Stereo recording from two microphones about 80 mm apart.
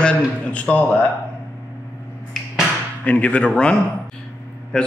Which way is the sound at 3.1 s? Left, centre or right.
Centre.